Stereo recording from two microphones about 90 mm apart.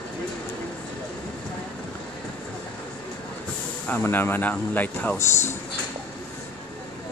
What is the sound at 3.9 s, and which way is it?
Speech, 20° left (ahead or behind).